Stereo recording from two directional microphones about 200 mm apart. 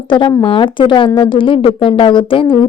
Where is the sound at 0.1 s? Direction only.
25° left (ahead or behind).